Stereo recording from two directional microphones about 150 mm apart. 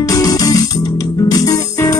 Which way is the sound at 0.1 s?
25° left (ahead or behind).